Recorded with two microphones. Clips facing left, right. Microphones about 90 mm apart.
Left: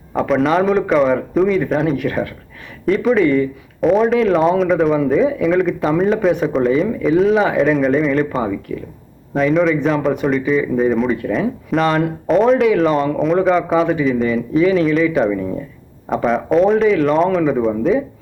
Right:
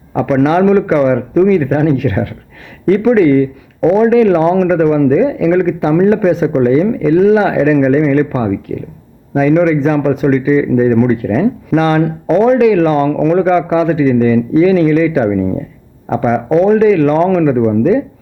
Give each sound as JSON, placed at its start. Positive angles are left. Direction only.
{"t": 0.1, "sound": "a man's voice", "side_deg": 0}
{"t": 16.0, "sound": "a man's voice", "side_deg": 0}